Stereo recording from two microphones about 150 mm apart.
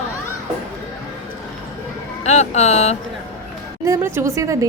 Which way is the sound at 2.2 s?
50° left (ahead or behind).